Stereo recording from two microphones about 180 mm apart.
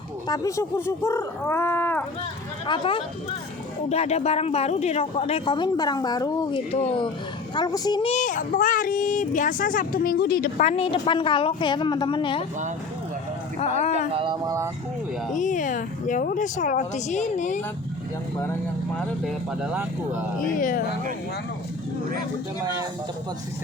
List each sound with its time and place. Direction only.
0.3 s speech: 15° left (ahead or behind)
2.6 s a woman's voice: 30° left (ahead or behind)
6.7 s a woman's voice: 35° left (ahead or behind)
8.1 s a child's voice: 45° left (ahead or behind)
10.7 s a woman's voice: 30° left (ahead or behind)
14.1 s speech: 30° right (ahead or behind)
15.4 s a child's voice: 45° left (ahead or behind)
18.9 s speech: 5° left (ahead or behind)
19.6 s speech: 10° right (ahead or behind)
20.5 s a child's voice: 50° left (ahead or behind)